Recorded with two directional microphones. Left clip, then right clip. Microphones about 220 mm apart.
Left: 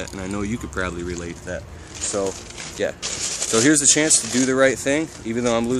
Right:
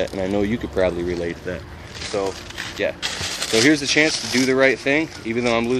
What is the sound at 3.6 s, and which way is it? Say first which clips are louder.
Speech: right 1 dB; 15° left (ahead or behind).